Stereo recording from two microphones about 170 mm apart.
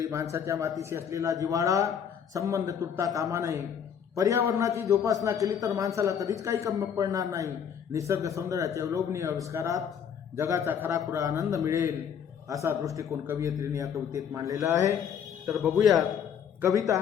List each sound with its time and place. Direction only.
0.0 s a man's voice: 20° right (ahead or behind)
15.8 s a man's voice: centre (ahead or behind)
16.6 s a man's voice: 20° right (ahead or behind)